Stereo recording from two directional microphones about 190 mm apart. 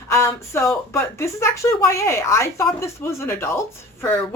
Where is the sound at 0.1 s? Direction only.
15° left (ahead or behind).